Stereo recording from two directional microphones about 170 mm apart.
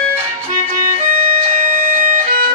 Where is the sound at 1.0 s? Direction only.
40° right (ahead or behind).